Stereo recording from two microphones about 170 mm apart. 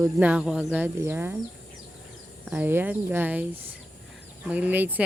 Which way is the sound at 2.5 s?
10° right (ahead or behind).